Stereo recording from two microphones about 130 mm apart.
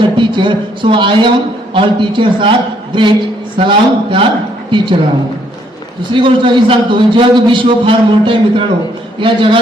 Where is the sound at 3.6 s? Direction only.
40° right (ahead or behind).